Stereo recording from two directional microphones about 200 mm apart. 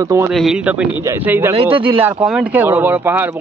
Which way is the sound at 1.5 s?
25° right (ahead or behind).